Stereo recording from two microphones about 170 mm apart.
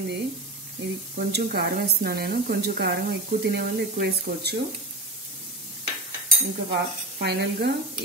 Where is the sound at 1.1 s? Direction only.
70° right (ahead or behind).